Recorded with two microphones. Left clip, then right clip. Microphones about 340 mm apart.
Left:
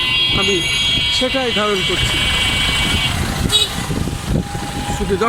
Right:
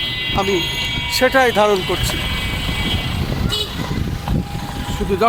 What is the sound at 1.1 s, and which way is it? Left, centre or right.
Speech, centre.